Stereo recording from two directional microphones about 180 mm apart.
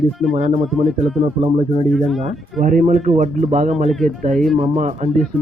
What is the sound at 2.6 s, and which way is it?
Speech, 45° right (ahead or behind).